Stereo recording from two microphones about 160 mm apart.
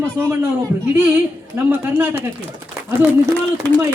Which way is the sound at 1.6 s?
15° right (ahead or behind).